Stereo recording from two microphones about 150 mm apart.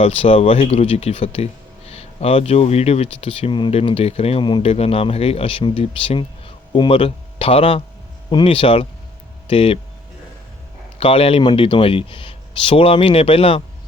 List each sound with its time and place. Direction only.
0.0 s speech: 40° left (ahead or behind)
10.9 s speech: 40° left (ahead or behind)